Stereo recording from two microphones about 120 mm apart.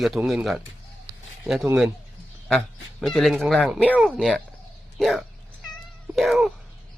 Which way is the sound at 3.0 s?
Centre (ahead or behind).